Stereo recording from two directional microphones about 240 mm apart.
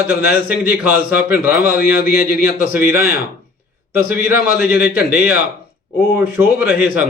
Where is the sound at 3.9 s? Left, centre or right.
Centre.